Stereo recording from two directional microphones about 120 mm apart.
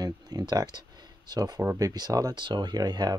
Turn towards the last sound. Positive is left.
turn(degrees=-35)  # may be behind; listen again after turning